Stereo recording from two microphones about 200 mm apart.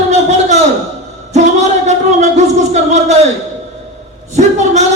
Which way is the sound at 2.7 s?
35° right (ahead or behind).